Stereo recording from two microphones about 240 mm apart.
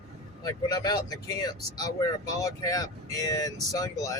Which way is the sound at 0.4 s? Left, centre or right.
Centre.